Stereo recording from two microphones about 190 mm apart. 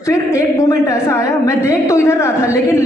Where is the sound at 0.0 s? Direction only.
15° left (ahead or behind).